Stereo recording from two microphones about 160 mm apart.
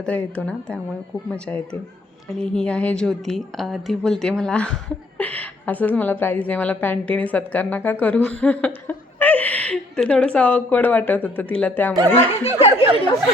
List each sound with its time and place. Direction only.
0.0 s a woman's voice: 10° left (ahead or behind)
12.1 s speech: 40° left (ahead or behind)